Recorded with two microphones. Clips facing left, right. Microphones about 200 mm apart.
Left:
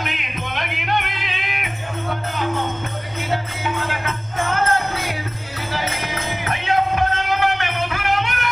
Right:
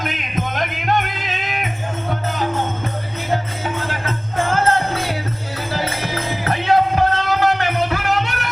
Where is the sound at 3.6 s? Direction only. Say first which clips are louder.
Even; 40° right (ahead or behind).